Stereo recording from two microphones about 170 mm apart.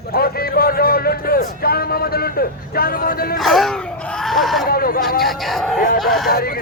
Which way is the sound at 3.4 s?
Centre (ahead or behind).